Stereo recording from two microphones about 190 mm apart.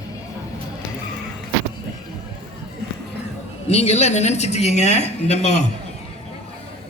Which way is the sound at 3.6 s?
35° left (ahead or behind).